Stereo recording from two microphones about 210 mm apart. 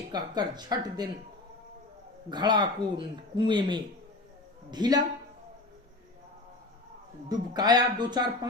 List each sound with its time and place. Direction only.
0.1 s speech: 20° right (ahead or behind)
2.3 s speech: 20° right (ahead or behind)
7.3 s speech: 20° right (ahead or behind)